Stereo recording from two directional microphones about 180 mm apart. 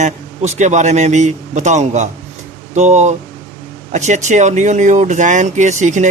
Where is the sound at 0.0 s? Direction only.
40° right (ahead or behind).